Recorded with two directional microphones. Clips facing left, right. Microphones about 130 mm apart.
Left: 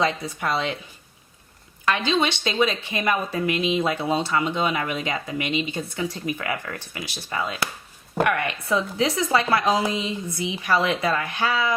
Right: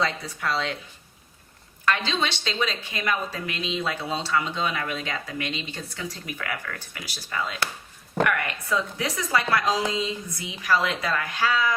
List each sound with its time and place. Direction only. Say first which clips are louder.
0.0 s speech: left 3 dB; 20° left (ahead or behind)
1.8 s speech: left 3 dB; 20° left (ahead or behind)